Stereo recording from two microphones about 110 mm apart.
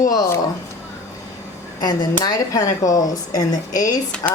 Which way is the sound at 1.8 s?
35° left (ahead or behind).